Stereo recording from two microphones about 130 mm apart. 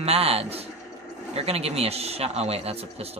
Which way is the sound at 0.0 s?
50° right (ahead or behind).